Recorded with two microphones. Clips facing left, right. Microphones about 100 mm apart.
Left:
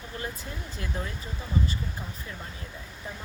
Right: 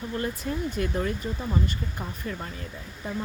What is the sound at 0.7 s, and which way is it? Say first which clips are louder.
Speech: right 5 dB; 70° right (ahead or behind).